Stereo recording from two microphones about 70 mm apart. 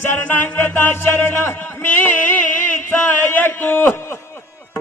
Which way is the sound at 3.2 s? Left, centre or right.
Left.